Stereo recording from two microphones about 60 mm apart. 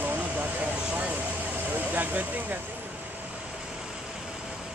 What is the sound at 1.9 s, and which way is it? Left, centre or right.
Speech, right.